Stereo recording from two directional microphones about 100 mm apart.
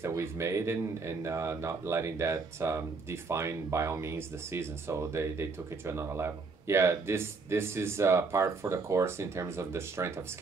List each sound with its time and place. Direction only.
0.0 s speech: 25° right (ahead or behind)